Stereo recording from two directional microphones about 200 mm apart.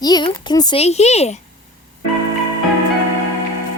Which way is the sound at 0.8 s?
35° left (ahead or behind).